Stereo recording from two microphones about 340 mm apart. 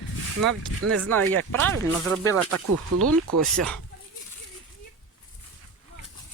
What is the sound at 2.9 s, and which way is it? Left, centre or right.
Speech, right.